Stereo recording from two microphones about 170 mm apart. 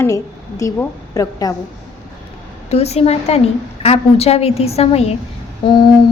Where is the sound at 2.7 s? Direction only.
40° left (ahead or behind).